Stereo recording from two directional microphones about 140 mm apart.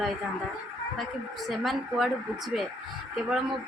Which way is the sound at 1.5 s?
Centre (ahead or behind).